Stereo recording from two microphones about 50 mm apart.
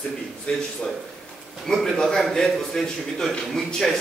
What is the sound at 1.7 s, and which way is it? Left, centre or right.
A man's voice, centre.